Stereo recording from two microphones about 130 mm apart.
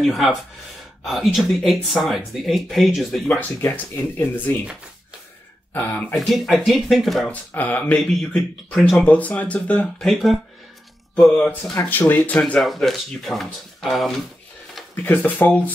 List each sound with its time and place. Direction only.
0.0 s speech: centre (ahead or behind)
3.3 s speech: 15° left (ahead or behind)
5.7 s speech: 15° left (ahead or behind)
6.1 s speech: centre (ahead or behind)
7.2 s speech: 15° left (ahead or behind)
8.7 s speech: centre (ahead or behind)
9.0 s speech: 10° left (ahead or behind)
15.0 s speech: 15° left (ahead or behind)